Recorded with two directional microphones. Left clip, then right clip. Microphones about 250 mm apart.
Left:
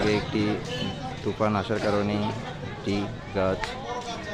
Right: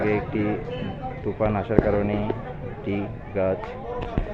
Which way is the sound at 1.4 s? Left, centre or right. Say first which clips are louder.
Right 4 dB; centre.